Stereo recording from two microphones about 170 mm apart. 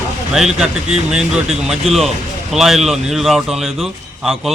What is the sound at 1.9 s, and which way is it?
Speech, 35° right (ahead or behind).